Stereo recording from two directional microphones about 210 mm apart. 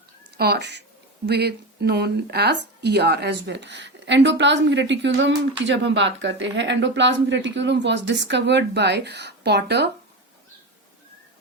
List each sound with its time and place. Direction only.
0.3 s speech: 50° right (ahead or behind)